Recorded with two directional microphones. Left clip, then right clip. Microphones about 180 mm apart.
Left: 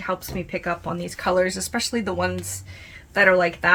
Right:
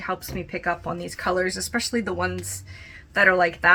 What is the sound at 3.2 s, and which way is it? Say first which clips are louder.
Speech: left 1 dB; 20° left (ahead or behind).